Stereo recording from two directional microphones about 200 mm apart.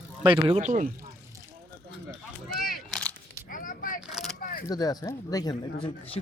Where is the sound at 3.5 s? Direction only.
45° left (ahead or behind).